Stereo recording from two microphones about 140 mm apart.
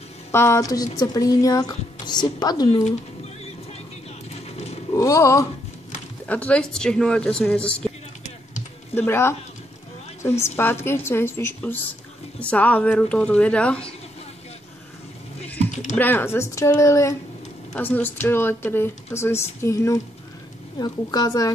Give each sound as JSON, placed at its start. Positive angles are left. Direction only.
{"t": 0.3, "sound": "a woman's voice", "side_deg": 20}
{"t": 4.3, "sound": "a sound", "side_deg": 50}
{"t": 4.9, "sound": "a woman's voice", "side_deg": 25}
{"t": 6.2, "sound": "a woman's voice", "side_deg": 10}
{"t": 8.9, "sound": "a woman's voice", "side_deg": 15}
{"t": 16.0, "sound": "a woman's voice", "side_deg": 15}